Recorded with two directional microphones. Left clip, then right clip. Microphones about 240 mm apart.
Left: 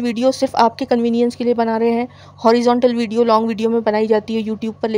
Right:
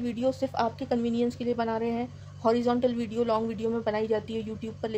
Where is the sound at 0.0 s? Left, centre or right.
Left.